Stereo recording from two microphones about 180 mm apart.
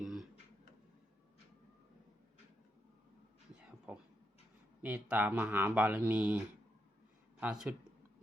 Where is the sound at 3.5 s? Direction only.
5° right (ahead or behind).